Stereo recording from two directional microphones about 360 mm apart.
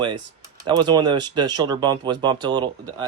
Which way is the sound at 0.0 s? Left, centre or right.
Centre.